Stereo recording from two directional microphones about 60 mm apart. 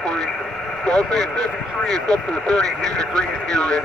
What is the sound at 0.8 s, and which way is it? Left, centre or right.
Speech, centre.